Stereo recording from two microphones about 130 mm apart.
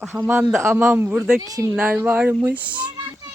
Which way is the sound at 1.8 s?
10° right (ahead or behind).